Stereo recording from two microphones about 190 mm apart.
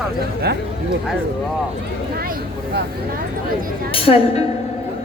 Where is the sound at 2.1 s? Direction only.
55° right (ahead or behind).